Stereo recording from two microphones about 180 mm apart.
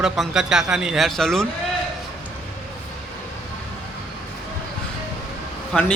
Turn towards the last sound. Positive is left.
turn(degrees=5)  # may be behind; listen again after turning